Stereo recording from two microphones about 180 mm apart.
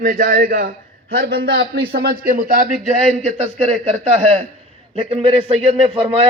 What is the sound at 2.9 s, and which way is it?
A man's voice, 35° right (ahead or behind).